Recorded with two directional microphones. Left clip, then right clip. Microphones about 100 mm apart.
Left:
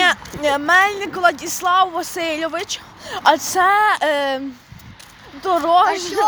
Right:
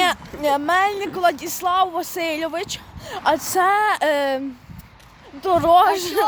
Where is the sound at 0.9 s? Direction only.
35° right (ahead or behind); by 6.2 s 55° right (ahead or behind).